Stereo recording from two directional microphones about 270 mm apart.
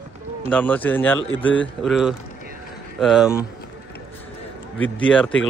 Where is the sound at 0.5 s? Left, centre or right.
Centre.